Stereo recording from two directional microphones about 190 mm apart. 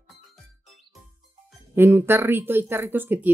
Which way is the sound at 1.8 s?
10° right (ahead or behind).